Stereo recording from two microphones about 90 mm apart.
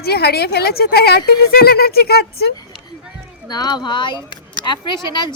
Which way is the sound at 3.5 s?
50° left (ahead or behind).